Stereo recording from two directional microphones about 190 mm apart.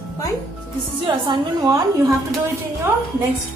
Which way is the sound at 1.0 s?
25° right (ahead or behind).